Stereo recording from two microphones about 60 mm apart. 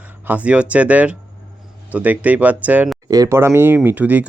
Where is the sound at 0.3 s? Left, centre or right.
Right.